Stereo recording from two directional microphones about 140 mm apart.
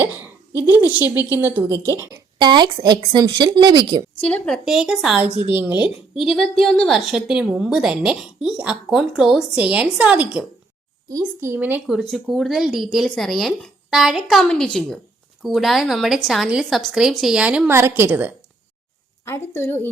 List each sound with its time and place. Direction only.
0.0 s a woman's voice: 15° right (ahead or behind)
1.1 s a woman's voice: 25° left (ahead or behind)
1.4 s speech: 15° right (ahead or behind)
2.4 s speech: 30° right (ahead or behind)
4.2 s a woman's voice: 10° left (ahead or behind); by 5.8 s 10° right (ahead or behind)
6.1 s a woman's voice: centre (ahead or behind)
11.9 s a woman's voice: centre (ahead or behind)
19.2 s a woman's voice: 20° left (ahead or behind)